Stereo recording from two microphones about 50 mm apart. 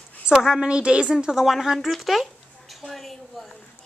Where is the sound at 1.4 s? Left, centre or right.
Centre.